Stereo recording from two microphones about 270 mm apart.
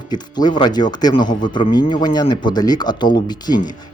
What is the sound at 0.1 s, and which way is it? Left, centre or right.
Speech, centre.